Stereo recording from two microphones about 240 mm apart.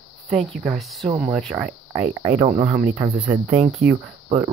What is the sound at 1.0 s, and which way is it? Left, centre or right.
Speech, right.